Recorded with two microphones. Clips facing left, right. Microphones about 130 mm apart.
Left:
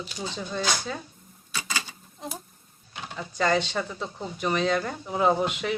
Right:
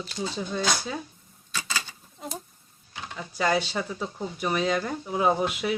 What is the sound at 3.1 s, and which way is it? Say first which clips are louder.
Speech: left 1 dB; 10° right (ahead or behind).